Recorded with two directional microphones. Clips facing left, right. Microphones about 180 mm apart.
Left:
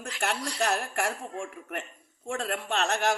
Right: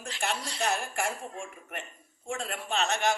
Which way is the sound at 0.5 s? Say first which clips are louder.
Left 2 dB; 65° left (ahead or behind).